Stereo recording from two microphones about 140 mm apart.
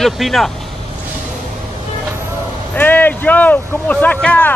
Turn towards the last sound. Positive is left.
turn(degrees=10)  # may be behind; listen again after turning